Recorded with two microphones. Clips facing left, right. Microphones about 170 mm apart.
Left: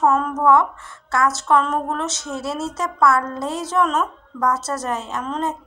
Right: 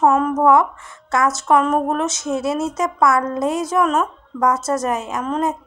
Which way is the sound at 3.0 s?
20° right (ahead or behind).